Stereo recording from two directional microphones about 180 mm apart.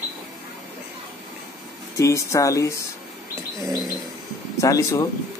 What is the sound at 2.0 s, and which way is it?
Speech, 15° left (ahead or behind).